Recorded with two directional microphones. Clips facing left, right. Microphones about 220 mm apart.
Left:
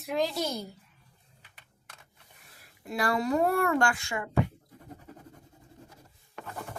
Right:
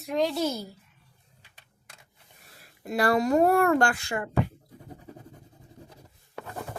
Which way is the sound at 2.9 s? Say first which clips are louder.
Right 5 dB; 40° right (ahead or behind).